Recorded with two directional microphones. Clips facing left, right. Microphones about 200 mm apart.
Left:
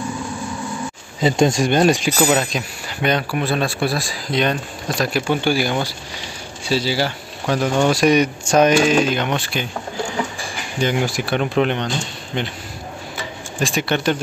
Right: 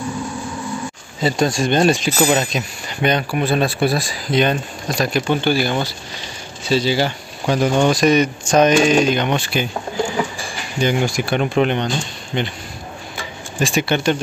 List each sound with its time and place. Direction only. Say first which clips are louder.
1.2 s speech: left 2 dB; 20° left (ahead or behind)
1.7 s speech: even; 10° left (ahead or behind)
2.1 s speech: right 1 dB; centre (ahead or behind)
10.8 s speech: right 2 dB; centre (ahead or behind)
13.6 s speech: right 2 dB; centre (ahead or behind)